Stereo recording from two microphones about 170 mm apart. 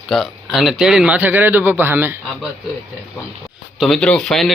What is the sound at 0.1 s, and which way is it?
A man's voice, centre (ahead or behind).